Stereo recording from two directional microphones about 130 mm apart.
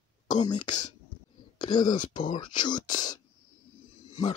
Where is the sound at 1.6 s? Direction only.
35° left (ahead or behind).